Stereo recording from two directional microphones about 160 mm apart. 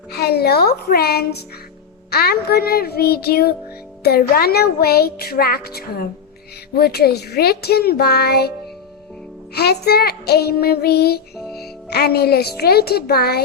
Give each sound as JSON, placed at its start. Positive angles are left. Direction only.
{"t": 0.1, "sound": "speech", "side_deg": 80}
{"t": 9.6, "sound": "speech", "side_deg": 85}